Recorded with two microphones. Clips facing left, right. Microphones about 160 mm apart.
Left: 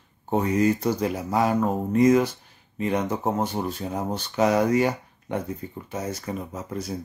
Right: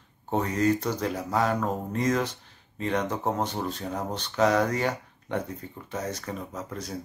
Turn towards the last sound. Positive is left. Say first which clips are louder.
# left 3 dB
turn(degrees=10)  # may be behind; listen again after turning